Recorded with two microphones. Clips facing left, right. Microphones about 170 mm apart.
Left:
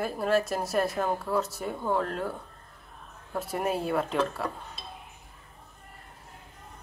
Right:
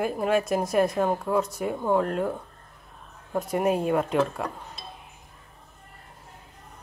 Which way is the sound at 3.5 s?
Centre (ahead or behind).